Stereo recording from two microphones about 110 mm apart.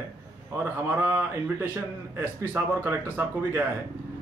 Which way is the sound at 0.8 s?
20° right (ahead or behind).